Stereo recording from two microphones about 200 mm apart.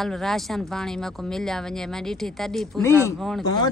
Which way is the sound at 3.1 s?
Centre (ahead or behind).